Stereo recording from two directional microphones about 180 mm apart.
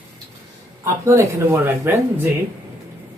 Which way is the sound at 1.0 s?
15° right (ahead or behind).